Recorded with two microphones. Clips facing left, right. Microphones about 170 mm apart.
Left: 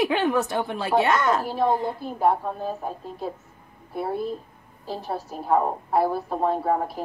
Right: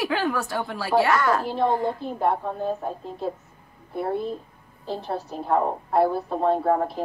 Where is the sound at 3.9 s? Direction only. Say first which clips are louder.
Right 1 dB; 5° left (ahead or behind).